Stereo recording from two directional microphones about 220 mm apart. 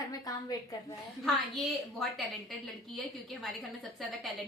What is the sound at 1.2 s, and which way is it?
A woman's voice, centre (ahead or behind).